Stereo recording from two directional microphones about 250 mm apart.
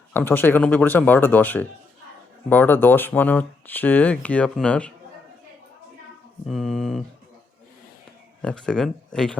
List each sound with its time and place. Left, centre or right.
0.1 s speech: centre
6.4 s speech: centre
8.4 s speech: centre